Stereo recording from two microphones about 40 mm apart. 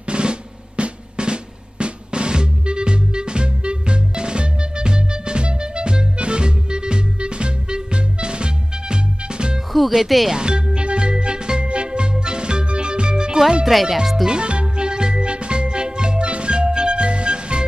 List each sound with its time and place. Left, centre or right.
0.1 s drum: right
9.7 s speech: centre
10.3 s music: right
13.7 s speech: centre
14.2 s music: right